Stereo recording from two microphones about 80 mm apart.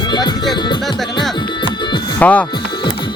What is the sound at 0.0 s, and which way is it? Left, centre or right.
Music, left.